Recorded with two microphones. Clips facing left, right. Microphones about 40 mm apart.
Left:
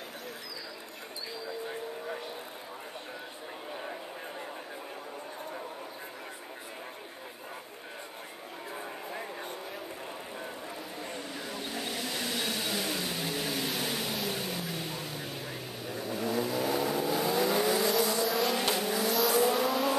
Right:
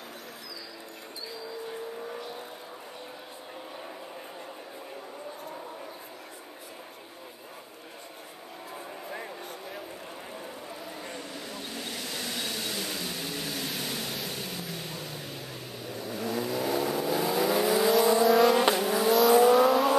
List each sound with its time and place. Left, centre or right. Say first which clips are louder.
1.7 s vehicle: even; centre
11.0 s vehicle: even; centre